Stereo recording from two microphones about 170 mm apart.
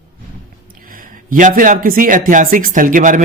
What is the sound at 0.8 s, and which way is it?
A man's voice, 55° right (ahead or behind).